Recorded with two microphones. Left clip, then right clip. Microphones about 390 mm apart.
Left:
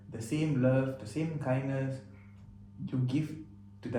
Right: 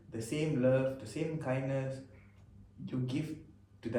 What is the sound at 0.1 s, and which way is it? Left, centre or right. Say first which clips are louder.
Speech: left 1 dB; centre.